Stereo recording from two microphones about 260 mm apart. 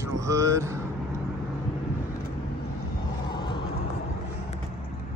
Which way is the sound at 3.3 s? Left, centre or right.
Centre.